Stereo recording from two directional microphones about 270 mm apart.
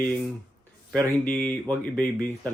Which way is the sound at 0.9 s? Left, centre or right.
Centre.